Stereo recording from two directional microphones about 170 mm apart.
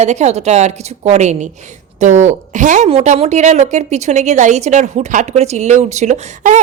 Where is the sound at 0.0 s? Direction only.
40° right (ahead or behind).